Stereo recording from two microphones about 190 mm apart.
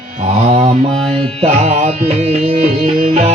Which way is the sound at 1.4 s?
35° right (ahead or behind).